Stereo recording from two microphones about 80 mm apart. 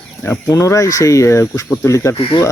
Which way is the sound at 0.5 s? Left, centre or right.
Left.